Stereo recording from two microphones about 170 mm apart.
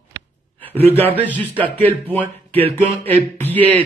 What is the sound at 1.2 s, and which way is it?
Speech, 10° left (ahead or behind).